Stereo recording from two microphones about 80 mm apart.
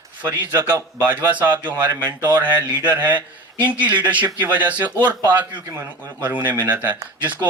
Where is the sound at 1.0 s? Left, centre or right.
Centre.